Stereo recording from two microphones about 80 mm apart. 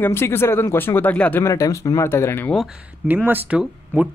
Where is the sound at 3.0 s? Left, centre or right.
Right.